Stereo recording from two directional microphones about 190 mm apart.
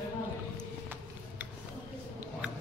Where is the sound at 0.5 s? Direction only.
10° right (ahead or behind).